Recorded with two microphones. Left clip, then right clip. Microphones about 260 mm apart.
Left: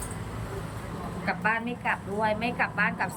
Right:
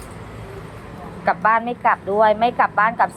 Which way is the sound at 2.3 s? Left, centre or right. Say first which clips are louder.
Right 12 dB; centre.